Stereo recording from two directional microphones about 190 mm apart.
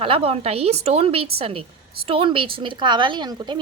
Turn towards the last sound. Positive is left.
turn(degrees=-20)  # may be behind; listen again after turning